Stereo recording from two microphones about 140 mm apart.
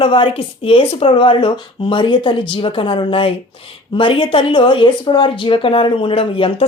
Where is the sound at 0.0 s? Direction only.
40° left (ahead or behind).